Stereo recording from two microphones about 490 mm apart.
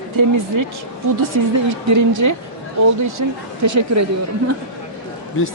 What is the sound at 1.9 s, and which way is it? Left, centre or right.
Speech, right.